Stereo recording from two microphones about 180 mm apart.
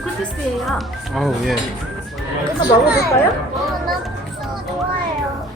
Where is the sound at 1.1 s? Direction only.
Centre (ahead or behind).